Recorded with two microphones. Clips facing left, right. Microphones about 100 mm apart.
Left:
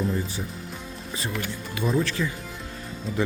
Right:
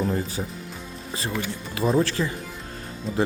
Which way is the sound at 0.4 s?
40° right (ahead or behind).